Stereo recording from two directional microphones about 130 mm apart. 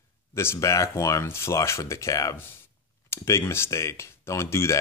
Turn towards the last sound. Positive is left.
turn(degrees=20)  # may be behind; listen again after turning